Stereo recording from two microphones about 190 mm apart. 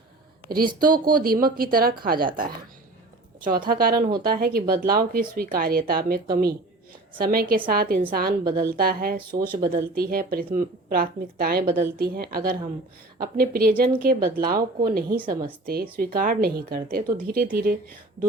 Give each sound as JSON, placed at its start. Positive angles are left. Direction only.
{"t": 0.4, "sound": "a woman's voice", "side_deg": -50}
{"t": 9.3, "sound": "speech", "side_deg": -25}
{"t": 9.6, "sound": "speech", "side_deg": -50}